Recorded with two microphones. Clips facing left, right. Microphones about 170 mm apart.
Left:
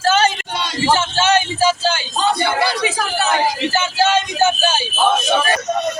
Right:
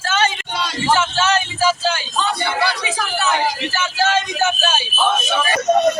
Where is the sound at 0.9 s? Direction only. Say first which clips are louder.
Left 1 dB; 30° left (ahead or behind).